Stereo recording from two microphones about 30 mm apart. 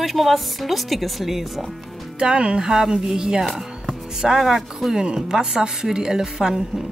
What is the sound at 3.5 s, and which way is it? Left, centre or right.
Music, centre.